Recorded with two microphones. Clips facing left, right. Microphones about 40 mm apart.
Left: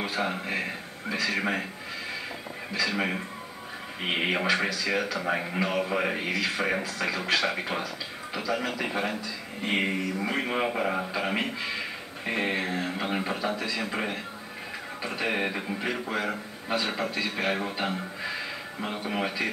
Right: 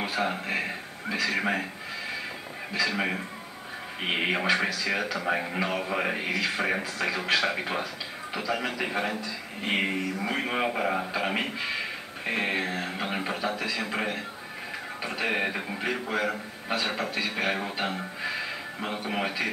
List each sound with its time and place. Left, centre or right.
0.0 s a man's voice: centre
0.3 s speech: centre
2.8 s speech: centre